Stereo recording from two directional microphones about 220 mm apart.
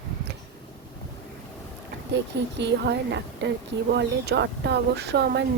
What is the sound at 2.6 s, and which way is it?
A woman's voice, 50° right (ahead or behind).